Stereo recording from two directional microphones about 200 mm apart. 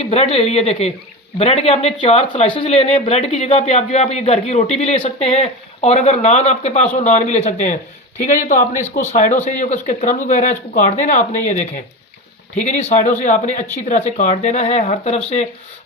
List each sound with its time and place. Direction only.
0.0 s speech: 30° left (ahead or behind)
9.1 s speech: 40° left (ahead or behind)